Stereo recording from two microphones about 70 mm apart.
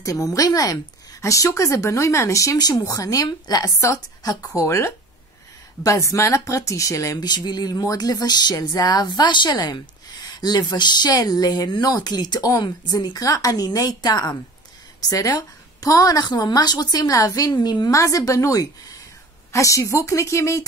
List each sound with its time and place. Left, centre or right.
0.0 s speech: left
1.2 s speech: left
2.6 s speech: left
3.3 s speech: left
4.6 s speech: left
13.2 s speech: left
15.0 s speech: left
17.6 s a woman's voice: left
17.9 s speech: left